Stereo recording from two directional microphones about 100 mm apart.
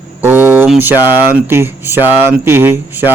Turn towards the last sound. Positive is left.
turn(degrees=-20)  # may be behind; listen again after turning